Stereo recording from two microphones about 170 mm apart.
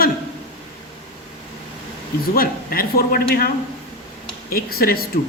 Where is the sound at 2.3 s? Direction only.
60° left (ahead or behind).